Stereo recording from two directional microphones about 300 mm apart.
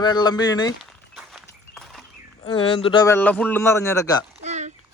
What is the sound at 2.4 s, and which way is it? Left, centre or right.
A man's voice, centre.